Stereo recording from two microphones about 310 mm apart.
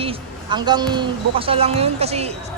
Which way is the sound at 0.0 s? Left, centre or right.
Centre.